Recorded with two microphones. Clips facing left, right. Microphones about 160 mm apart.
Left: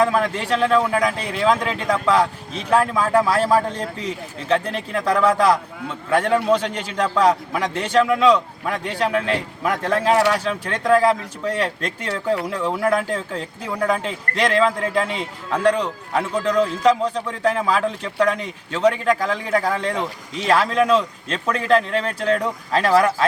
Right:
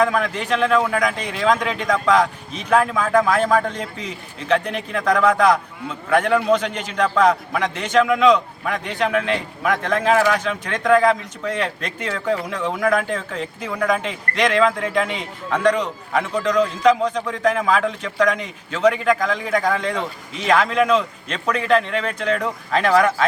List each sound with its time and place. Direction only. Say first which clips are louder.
0.0 s a man's voice: left 1 dB; 30° left (ahead or behind)